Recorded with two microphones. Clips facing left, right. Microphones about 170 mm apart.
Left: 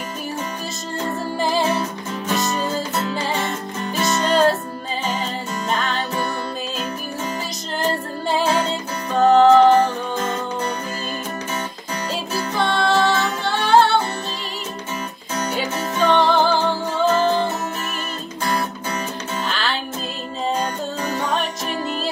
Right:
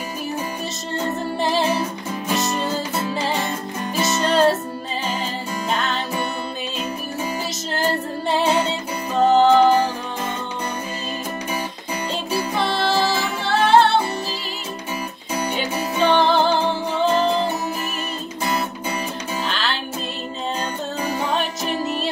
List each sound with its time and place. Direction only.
0.9 s music: centre (ahead or behind)
4.0 s music: centre (ahead or behind)
5.7 s music: centre (ahead or behind)
7.7 s music: centre (ahead or behind)
12.5 s music: centre (ahead or behind)
15.7 s music: centre (ahead or behind)
19.4 s music: centre (ahead or behind)
21.0 s music: centre (ahead or behind)